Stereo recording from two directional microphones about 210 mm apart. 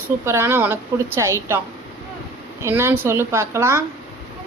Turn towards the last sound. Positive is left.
turn(degrees=-10)  # may be behind; listen again after turning